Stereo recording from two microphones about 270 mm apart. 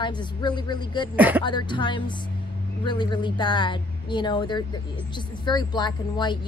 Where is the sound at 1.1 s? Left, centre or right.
Centre.